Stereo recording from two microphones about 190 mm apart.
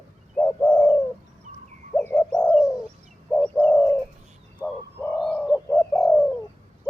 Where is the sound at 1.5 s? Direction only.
35° right (ahead or behind).